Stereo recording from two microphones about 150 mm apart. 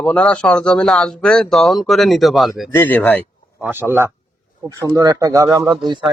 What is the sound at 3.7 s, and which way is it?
Speech, 15° right (ahead or behind).